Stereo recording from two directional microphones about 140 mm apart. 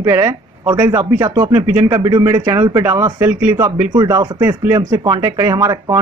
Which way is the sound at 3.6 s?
30° right (ahead or behind).